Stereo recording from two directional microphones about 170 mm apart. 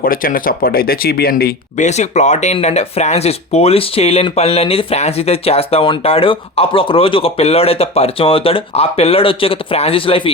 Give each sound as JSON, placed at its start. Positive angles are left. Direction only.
{"t": 0.0, "sound": "speech", "side_deg": 55}
{"t": 1.7, "sound": "speech", "side_deg": 45}